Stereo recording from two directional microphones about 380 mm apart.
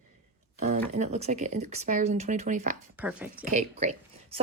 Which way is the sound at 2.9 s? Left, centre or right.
Centre.